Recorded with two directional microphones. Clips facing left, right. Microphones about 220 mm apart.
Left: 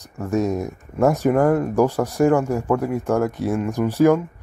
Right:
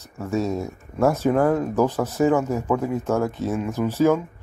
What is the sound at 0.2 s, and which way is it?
Speech, 15° left (ahead or behind).